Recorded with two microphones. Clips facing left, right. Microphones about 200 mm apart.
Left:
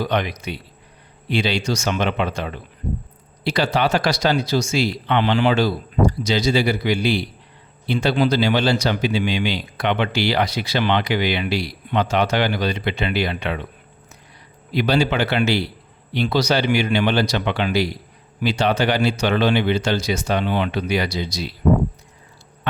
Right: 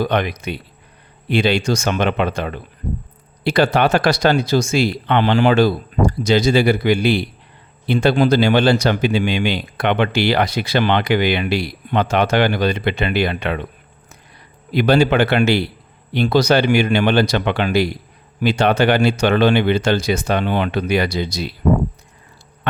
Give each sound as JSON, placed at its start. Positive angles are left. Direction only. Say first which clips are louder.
{"t": 0.0, "sound": "speech", "louder": "right 3 dB", "side_deg": -55}
{"t": 14.7, "sound": "speech", "louder": "right 5 dB", "side_deg": -55}